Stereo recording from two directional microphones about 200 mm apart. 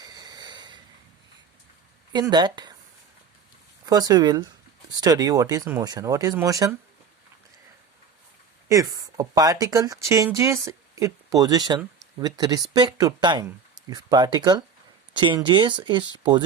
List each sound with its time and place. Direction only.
0.0 s a sound: 20° right (ahead or behind)
2.1 s speech: 20° right (ahead or behind)
3.8 s speech: 20° right (ahead or behind)
8.7 s speech: 15° right (ahead or behind)